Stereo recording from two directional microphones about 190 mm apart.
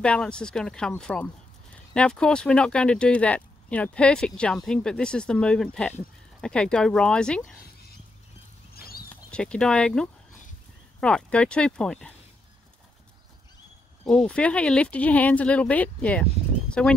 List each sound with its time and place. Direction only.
0.0 s speech: 5° left (ahead or behind)
8.7 s a sound: 55° left (ahead or behind)
9.1 s speech: 5° left (ahead or behind)
14.0 s speech: 5° left (ahead or behind)